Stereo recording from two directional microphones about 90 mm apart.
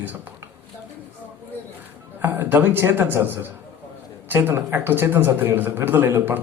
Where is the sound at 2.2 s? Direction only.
25° right (ahead or behind).